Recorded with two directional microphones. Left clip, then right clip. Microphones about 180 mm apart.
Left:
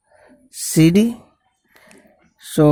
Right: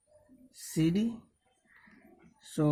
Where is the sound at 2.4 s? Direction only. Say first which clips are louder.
Left 17 dB; 45° left (ahead or behind).